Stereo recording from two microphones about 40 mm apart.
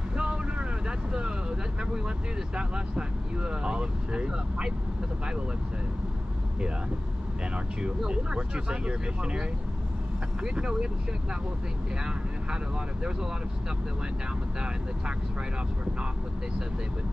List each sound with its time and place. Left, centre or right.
0.2 s vehicle: right
2.0 s speech: right
8.1 s speech: right
10.5 s speech: centre